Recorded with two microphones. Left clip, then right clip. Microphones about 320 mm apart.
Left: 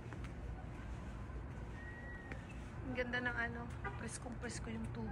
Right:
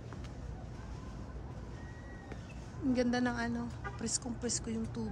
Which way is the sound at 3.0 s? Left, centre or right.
Centre.